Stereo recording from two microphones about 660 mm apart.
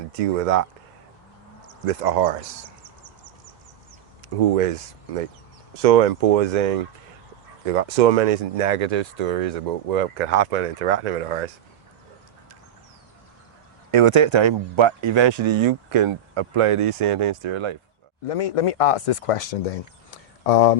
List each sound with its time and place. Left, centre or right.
0.1 s speech: right
1.9 s speech: right
4.5 s speech: right
13.9 s speech: right
18.3 s speech: left